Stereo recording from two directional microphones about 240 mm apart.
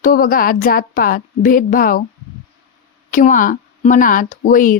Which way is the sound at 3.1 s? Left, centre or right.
Left.